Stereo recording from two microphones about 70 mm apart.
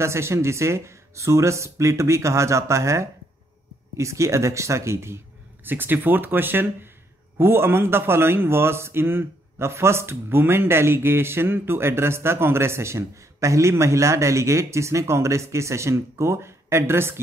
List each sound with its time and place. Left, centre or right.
0.0 s a man's voice: right